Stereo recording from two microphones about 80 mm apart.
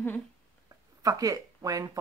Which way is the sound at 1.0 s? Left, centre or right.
Right.